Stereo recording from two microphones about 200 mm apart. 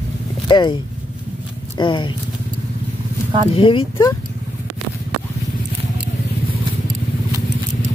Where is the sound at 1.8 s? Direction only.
25° left (ahead or behind).